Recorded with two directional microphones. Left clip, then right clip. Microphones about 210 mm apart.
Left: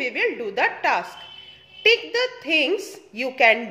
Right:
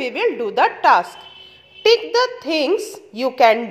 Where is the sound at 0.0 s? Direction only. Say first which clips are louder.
Right 4 dB; 25° right (ahead or behind).